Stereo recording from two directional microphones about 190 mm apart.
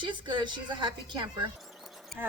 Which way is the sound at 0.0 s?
25° right (ahead or behind).